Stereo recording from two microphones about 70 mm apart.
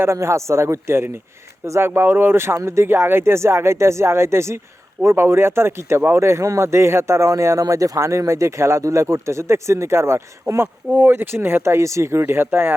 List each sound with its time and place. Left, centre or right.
0.0 s speech: right